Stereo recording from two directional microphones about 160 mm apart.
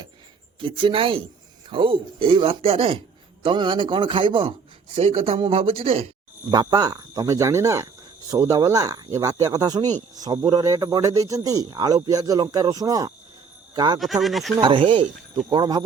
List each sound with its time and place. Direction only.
0.6 s speech: 30° right (ahead or behind)
6.5 s speech: 25° right (ahead or behind)
14.0 s speech: centre (ahead or behind)
14.5 s speech: 30° right (ahead or behind)